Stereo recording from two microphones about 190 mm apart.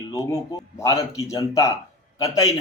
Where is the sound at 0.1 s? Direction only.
20° left (ahead or behind).